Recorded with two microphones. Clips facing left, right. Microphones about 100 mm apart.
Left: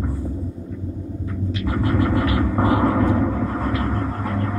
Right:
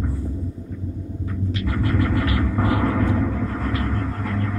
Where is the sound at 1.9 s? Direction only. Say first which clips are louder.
Left 3 dB; 20° left (ahead or behind).